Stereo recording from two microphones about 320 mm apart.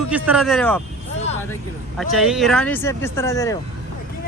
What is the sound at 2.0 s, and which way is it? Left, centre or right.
Speech, centre.